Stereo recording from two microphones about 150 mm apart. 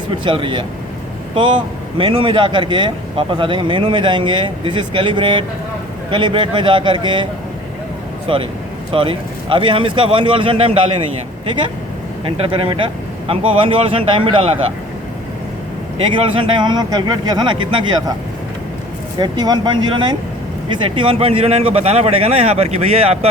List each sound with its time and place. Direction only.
0.3 s speech: 35° right (ahead or behind)
8.3 s speech: 35° right (ahead or behind)
12.2 s speech: 40° right (ahead or behind)
16.1 s speech: 35° right (ahead or behind)
19.2 s speech: 30° right (ahead or behind)